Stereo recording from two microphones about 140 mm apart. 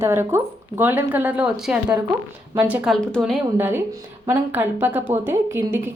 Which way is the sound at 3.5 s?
15° right (ahead or behind).